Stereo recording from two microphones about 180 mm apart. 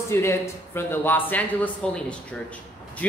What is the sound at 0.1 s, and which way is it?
A man's voice, 15° left (ahead or behind).